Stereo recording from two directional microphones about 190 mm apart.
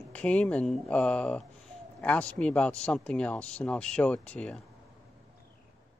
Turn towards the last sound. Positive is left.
turn(degrees=5)  # may be behind; listen again after turning